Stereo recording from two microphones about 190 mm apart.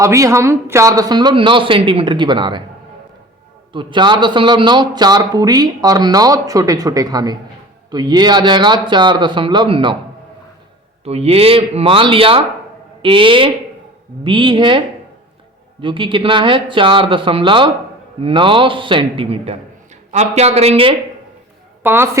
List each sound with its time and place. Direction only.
0.0 s a man's voice: 15° right (ahead or behind)
3.7 s a man's voice: 25° right (ahead or behind)
11.0 s a man's voice: 35° right (ahead or behind)
21.8 s a woman's voice: 10° right (ahead or behind)